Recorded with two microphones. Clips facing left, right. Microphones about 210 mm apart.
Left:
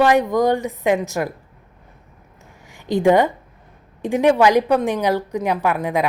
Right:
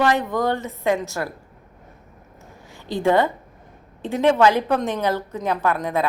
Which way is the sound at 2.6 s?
15° left (ahead or behind).